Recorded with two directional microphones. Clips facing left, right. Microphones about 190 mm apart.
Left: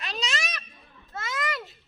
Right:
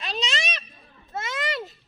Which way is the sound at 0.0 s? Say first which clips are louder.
Right 3 dB; 25° right (ahead or behind).